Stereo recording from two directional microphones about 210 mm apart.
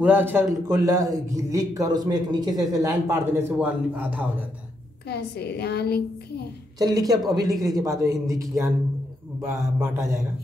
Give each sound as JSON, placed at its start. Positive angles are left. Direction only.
{"t": 0.0, "sound": "a man's voice", "side_deg": -10}
{"t": 5.0, "sound": "a child's voice", "side_deg": 50}
{"t": 6.8, "sound": "a man's voice", "side_deg": -15}